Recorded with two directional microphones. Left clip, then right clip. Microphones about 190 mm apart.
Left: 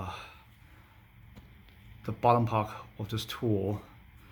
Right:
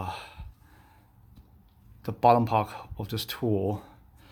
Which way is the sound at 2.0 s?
45° right (ahead or behind).